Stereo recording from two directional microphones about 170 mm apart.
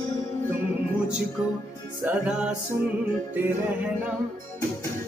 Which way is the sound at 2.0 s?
10° right (ahead or behind).